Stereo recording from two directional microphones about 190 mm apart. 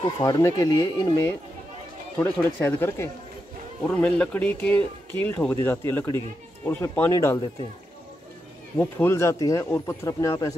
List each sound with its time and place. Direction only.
0.2 s speech: 15° left (ahead or behind)
8.7 s speech: 15° left (ahead or behind)